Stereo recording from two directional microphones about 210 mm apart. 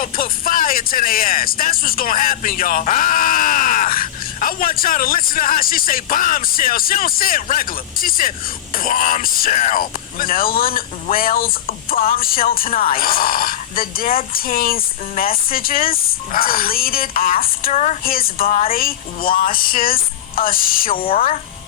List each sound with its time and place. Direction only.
0.0 s speech: 40° left (ahead or behind)
18.4 s a woman's voice: 30° left (ahead or behind)
18.7 s speech: 45° left (ahead or behind)